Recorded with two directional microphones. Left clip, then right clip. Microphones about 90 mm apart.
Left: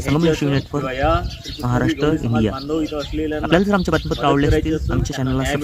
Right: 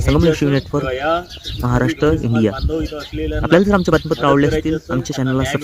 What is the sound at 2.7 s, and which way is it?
Speech, 20° left (ahead or behind).